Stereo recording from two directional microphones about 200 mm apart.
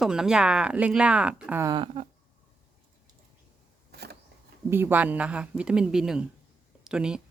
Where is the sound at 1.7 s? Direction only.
25° right (ahead or behind).